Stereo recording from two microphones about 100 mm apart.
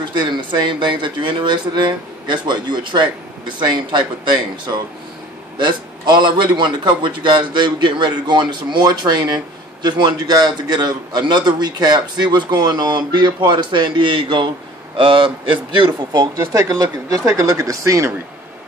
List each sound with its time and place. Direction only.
0.1 s a man's voice: 50° right (ahead or behind); by 18.1 s 30° right (ahead or behind)